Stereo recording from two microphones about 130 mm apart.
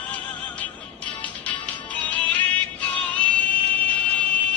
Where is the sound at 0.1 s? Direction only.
10° left (ahead or behind).